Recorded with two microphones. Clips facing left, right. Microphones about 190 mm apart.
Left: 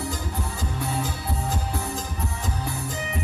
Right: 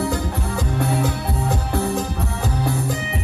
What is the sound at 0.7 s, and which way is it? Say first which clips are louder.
Music: right 8 dB; 65° right (ahead or behind).